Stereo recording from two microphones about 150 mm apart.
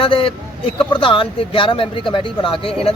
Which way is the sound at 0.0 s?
35° left (ahead or behind).